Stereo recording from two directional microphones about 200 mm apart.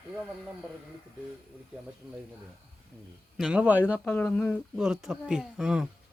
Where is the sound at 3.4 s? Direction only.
5° right (ahead or behind).